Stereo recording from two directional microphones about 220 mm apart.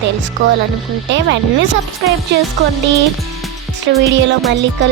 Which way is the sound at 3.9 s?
55° right (ahead or behind).